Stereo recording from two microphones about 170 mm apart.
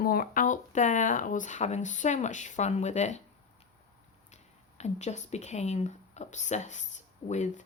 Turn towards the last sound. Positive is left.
turn(degrees=45)  # may be behind; listen again after turning